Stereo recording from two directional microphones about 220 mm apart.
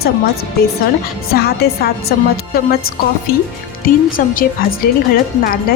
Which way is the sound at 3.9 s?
40° left (ahead or behind).